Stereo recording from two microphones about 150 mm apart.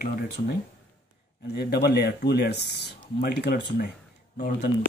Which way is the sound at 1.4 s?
90° left.